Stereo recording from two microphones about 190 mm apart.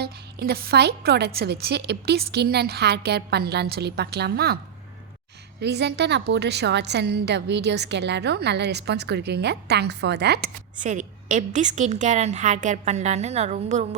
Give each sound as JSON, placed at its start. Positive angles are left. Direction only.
{"t": 0.0, "sound": "a woman's voice", "side_deg": -55}
{"t": 10.8, "sound": "a woman's voice", "side_deg": -40}